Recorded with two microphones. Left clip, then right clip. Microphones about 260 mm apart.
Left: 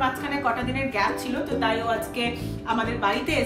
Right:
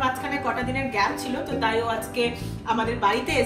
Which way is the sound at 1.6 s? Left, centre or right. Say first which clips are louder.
Even; centre.